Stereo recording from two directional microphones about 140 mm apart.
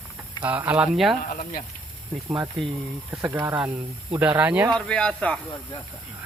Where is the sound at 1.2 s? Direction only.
80° left.